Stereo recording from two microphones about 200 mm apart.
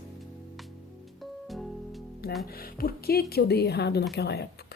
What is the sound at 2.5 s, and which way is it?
Speech, 50° left (ahead or behind).